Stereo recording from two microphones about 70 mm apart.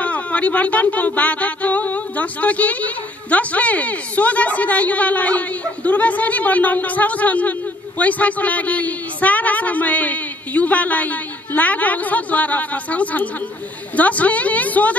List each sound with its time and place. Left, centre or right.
0.0 s a woman's voice: left